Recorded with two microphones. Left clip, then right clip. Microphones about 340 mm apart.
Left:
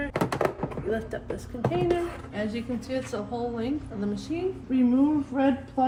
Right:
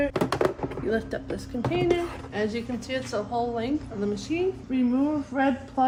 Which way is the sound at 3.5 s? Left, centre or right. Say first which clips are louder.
Right 2 dB; centre.